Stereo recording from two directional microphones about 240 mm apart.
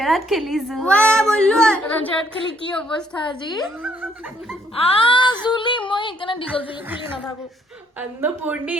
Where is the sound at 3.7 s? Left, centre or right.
Centre.